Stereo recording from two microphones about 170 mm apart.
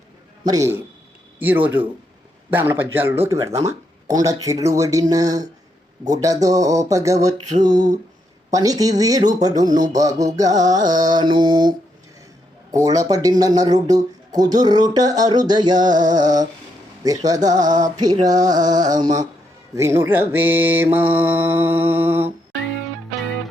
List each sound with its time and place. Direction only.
0.4 s speech: 20° right (ahead or behind)
1.4 s mantra: 10° right (ahead or behind)
3.6 s speech: 20° right (ahead or behind)
12.7 s speech: 20° right (ahead or behind)
19.7 s mantra: 20° right (ahead or behind)